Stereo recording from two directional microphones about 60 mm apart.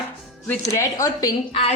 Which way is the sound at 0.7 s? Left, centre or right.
Left.